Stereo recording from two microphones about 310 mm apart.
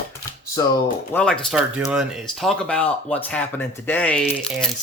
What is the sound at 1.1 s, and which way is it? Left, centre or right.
Speech, centre.